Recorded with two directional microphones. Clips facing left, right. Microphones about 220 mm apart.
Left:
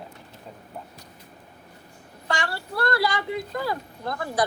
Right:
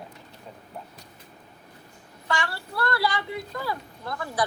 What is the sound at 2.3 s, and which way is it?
Speech, 45° left (ahead or behind).